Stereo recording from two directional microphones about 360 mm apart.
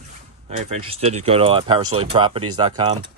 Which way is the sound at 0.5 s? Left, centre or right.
Centre.